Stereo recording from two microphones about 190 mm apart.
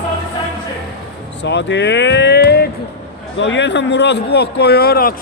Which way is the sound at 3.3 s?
70° left (ahead or behind).